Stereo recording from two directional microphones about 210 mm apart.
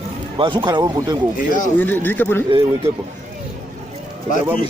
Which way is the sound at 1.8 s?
10° left (ahead or behind).